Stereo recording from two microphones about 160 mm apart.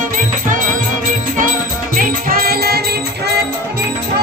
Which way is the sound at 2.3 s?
70° right (ahead or behind).